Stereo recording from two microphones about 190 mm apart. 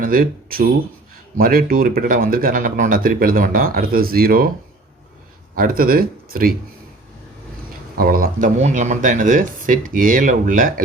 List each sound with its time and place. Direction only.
0.0 s speech: 50° right (ahead or behind)
5.5 s speech: 50° right (ahead or behind)
7.9 s speech: 50° right (ahead or behind)